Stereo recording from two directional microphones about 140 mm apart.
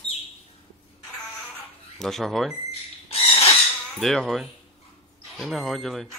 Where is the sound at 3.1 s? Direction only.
45° left (ahead or behind).